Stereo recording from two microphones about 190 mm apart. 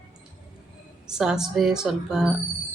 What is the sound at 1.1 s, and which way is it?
A woman's voice, 5° right (ahead or behind).